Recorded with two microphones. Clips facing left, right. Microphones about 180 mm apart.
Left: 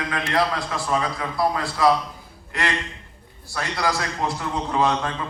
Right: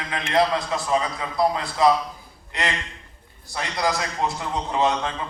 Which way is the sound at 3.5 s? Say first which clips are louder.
Even; 20° right (ahead or behind).